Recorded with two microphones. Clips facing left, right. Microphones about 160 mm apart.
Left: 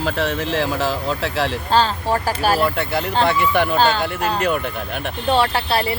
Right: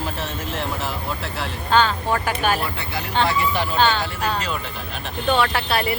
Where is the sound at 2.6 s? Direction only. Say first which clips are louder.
Left 8 dB; 60° left (ahead or behind).